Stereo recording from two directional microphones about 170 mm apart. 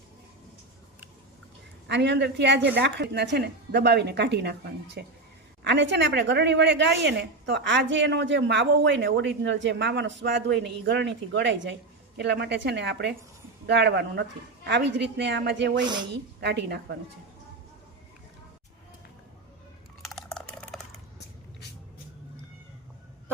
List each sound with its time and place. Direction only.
1.9 s a woman's voice: 90° right
2.7 s a woman's voice: 75° right (ahead or behind)
5.6 s a woman's voice: 90° right
13.7 s a woman's voice: 75° right (ahead or behind)
15.8 s speech: 25° right (ahead or behind)
16.4 s a woman's voice: 80° right
20.0 s a sound: centre (ahead or behind)